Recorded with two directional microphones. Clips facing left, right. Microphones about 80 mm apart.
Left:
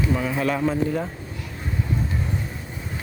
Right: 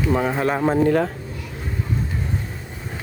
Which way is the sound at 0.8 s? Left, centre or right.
Right.